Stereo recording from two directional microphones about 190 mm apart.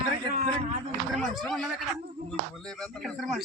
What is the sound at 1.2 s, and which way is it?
Speech, centre (ahead or behind).